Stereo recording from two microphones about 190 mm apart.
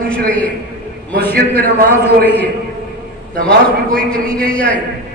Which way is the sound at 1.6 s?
50° right (ahead or behind).